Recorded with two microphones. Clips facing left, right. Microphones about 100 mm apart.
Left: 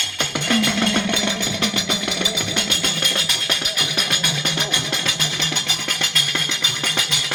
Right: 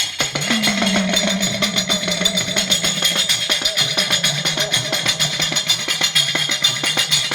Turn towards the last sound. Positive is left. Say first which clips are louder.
# right 1 dB
turn(degrees=40)  # may be behind; listen again after turning